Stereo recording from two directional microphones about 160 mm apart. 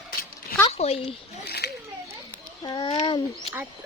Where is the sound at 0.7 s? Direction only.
40° left (ahead or behind).